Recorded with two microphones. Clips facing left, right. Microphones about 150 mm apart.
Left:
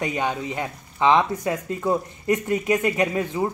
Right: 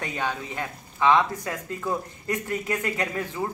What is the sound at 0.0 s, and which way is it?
A woman's voice, 15° left (ahead or behind).